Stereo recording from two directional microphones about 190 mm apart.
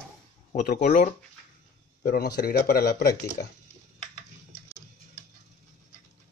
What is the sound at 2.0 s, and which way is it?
Speech, 55° left (ahead or behind).